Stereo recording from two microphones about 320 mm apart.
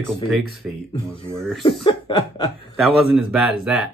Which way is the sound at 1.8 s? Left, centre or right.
Centre.